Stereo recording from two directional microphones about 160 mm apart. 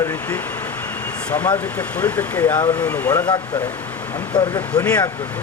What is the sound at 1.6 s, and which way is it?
Speech, 10° left (ahead or behind).